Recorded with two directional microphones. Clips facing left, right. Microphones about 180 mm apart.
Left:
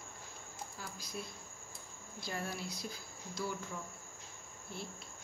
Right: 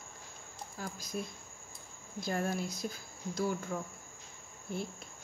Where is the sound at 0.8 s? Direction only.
45° right (ahead or behind).